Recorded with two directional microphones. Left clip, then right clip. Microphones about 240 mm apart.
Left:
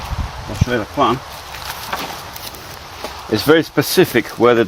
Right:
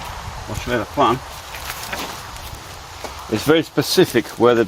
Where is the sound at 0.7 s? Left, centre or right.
Centre.